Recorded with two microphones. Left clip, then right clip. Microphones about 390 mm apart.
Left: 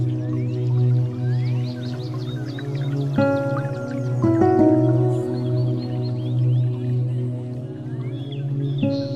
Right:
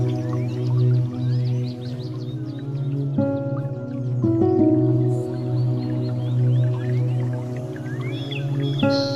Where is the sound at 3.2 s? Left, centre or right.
Left.